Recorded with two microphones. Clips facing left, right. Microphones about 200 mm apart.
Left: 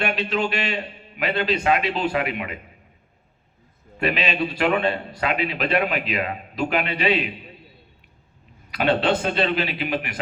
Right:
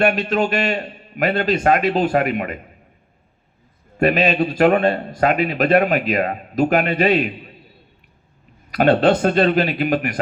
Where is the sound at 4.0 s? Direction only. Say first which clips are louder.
Right 7 dB; 45° right (ahead or behind).